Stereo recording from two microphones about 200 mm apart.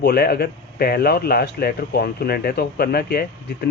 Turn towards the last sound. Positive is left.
turn(degrees=50)  # may be behind; listen again after turning